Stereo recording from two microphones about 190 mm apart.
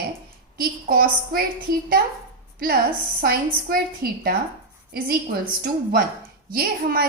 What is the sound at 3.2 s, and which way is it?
A woman's voice, 50° right (ahead or behind).